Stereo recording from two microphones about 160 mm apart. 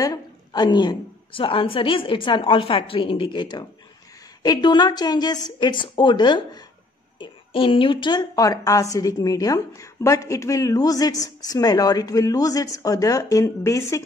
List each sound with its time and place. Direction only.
0.0 s a woman's voice: 25° left (ahead or behind)